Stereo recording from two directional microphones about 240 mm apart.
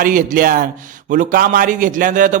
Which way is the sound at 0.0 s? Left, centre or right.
Right.